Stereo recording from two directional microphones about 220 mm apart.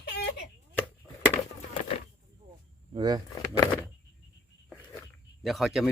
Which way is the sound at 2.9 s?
20° right (ahead or behind).